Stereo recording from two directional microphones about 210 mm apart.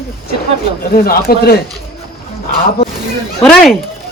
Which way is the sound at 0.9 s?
45° left (ahead or behind).